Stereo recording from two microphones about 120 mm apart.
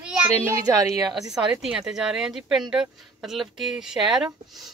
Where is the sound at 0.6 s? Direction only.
30° right (ahead or behind).